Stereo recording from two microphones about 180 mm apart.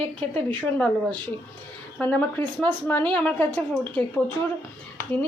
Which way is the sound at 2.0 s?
10° left (ahead or behind).